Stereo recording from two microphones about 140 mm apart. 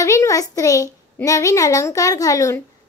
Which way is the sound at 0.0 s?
20° left (ahead or behind).